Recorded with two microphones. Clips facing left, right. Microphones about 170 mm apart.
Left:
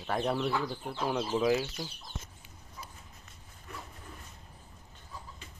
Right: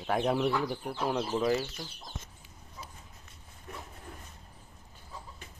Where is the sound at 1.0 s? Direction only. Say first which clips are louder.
Left 1 dB; 5° left (ahead or behind).